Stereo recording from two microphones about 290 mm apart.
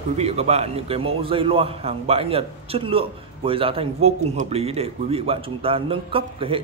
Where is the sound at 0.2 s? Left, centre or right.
Right.